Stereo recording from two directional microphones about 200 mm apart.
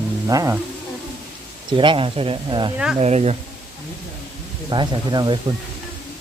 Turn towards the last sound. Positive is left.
turn(degrees=-20)  # may be behind; listen again after turning